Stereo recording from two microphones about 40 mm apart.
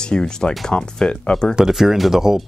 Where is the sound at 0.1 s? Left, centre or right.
Centre.